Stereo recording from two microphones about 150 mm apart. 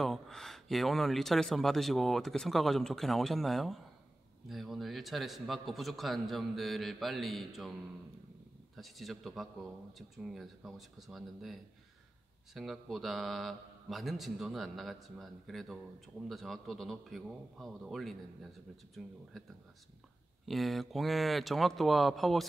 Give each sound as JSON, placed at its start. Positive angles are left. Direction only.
{"t": 0.0, "sound": "speech", "side_deg": 5}
{"t": 8.7, "sound": "speech", "side_deg": 0}